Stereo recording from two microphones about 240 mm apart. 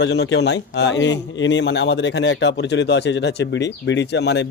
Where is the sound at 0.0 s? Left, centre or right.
Left.